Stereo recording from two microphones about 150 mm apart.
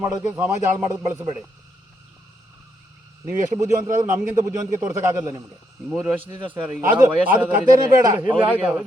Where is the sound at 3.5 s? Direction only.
20° right (ahead or behind).